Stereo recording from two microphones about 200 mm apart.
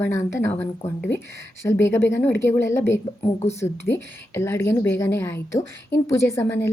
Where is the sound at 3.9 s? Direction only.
60° left (ahead or behind).